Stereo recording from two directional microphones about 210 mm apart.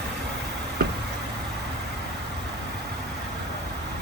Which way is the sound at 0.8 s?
50° right (ahead or behind).